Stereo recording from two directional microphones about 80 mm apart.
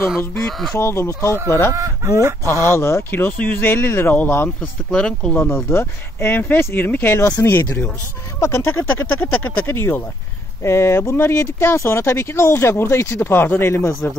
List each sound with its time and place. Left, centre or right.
0.4 s speech: centre
0.7 s speech: left
1.7 s speech: right
2.7 s speech: left
4.6 s speech: centre
5.4 s speech: left
8.4 s speech: left